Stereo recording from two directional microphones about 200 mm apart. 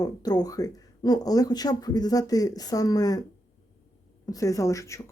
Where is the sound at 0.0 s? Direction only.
20° left (ahead or behind).